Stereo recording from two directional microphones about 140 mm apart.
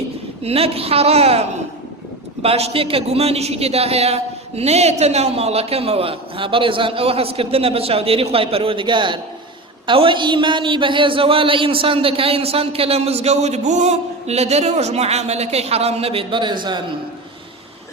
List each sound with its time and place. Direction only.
0.4 s a man's voice: 45° right (ahead or behind)